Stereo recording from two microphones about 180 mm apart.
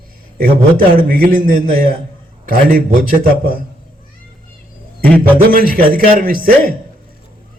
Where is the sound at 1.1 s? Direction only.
50° right (ahead or behind).